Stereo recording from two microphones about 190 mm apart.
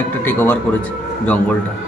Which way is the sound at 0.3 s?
10° left (ahead or behind).